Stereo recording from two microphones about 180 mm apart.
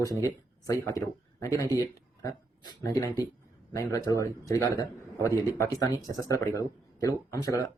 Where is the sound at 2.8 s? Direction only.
15° left (ahead or behind).